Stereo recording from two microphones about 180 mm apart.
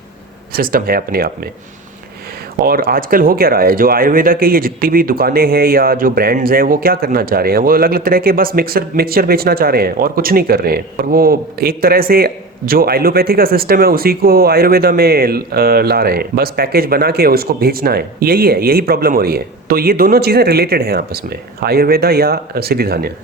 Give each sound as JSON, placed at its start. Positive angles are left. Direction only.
{"t": 0.5, "sound": "speech", "side_deg": -55}
{"t": 2.6, "sound": "speech", "side_deg": -55}